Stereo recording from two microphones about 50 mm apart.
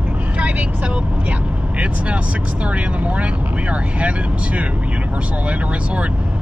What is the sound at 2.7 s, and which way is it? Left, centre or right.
Speech, right.